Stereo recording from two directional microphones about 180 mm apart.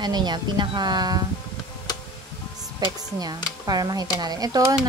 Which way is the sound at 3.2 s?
20° right (ahead or behind).